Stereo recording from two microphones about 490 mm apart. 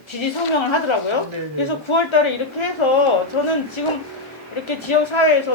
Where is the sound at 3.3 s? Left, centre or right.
Left.